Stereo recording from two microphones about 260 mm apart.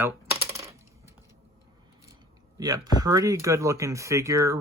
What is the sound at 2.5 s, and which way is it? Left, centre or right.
Speech, centre.